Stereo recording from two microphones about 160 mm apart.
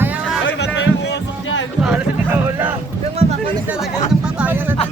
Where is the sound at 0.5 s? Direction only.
90° left.